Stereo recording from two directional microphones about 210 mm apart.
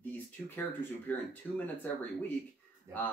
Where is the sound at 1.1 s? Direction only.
10° left (ahead or behind).